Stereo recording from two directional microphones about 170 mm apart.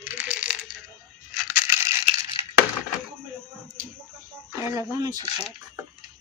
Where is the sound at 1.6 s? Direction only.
15° right (ahead or behind).